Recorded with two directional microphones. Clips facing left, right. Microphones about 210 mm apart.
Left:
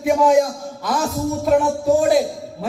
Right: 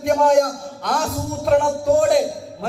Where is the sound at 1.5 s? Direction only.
Centre (ahead or behind).